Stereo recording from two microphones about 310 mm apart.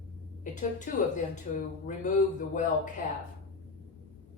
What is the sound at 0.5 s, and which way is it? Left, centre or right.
Speech, left.